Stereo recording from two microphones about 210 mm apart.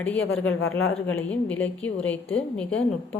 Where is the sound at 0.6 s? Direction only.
75° left (ahead or behind).